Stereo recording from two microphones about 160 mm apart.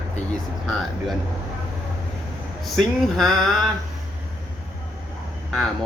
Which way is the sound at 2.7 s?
Centre (ahead or behind).